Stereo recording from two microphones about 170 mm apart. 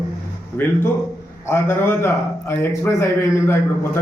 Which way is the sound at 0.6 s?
10° left (ahead or behind).